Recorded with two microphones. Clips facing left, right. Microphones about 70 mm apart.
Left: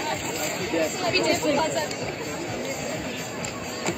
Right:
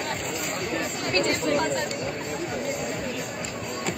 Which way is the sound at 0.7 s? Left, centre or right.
Right.